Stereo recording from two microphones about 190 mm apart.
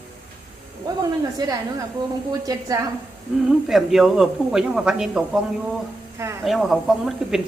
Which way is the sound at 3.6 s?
Centre (ahead or behind).